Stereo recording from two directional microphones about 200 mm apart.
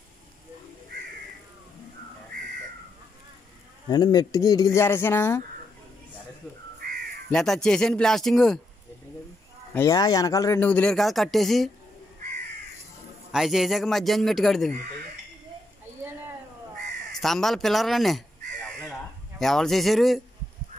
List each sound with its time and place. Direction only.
3.9 s speech: 20° left (ahead or behind)
7.2 s speech: centre (ahead or behind)
9.8 s speech: 15° left (ahead or behind); by 11.7 s centre (ahead or behind)
13.3 s speech: centre (ahead or behind)
17.1 s crow: centre (ahead or behind)